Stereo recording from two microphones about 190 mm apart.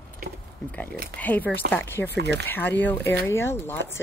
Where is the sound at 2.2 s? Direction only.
65° right (ahead or behind).